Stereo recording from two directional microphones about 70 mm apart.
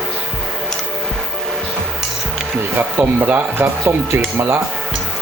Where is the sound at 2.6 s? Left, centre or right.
Right.